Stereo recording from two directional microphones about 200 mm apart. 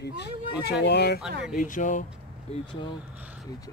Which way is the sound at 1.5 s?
40° left (ahead or behind).